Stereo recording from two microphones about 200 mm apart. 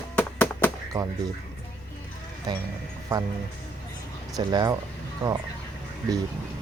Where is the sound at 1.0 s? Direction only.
20° right (ahead or behind).